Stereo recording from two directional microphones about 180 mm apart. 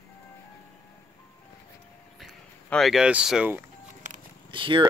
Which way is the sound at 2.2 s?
Centre (ahead or behind).